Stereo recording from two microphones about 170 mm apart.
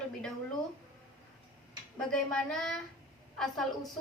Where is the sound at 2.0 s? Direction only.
5° left (ahead or behind).